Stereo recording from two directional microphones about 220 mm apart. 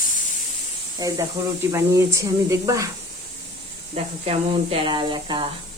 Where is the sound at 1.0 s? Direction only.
15° right (ahead or behind).